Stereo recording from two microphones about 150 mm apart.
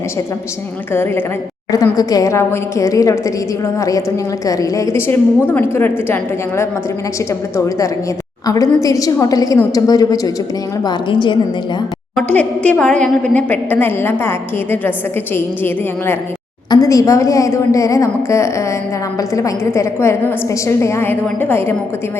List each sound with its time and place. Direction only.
0.9 s a woman's voice: 15° left (ahead or behind)
7.3 s a woman's voice: 20° left (ahead or behind)
12.1 s a woman's voice: 10° left (ahead or behind)
16.6 s a woman's voice: 25° left (ahead or behind)